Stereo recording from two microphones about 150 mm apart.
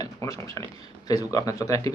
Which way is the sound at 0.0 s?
20° left (ahead or behind).